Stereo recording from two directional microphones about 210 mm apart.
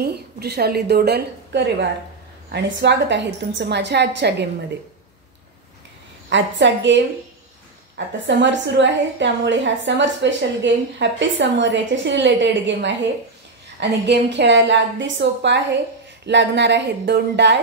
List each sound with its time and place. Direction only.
0.0 s a woman's voice: 50° right (ahead or behind)
6.3 s a woman's voice: 60° right (ahead or behind)
8.3 s a woman's voice: 60° right (ahead or behind)